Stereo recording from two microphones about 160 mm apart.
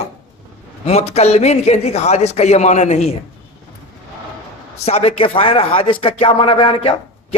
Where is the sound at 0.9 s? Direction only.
40° left (ahead or behind).